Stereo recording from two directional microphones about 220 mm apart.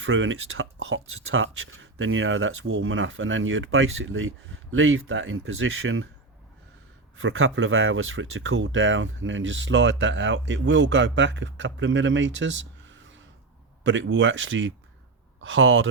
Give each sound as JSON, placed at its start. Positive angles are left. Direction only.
{"t": 0.0, "sound": "speech", "side_deg": -60}
{"t": 7.2, "sound": "speech", "side_deg": -65}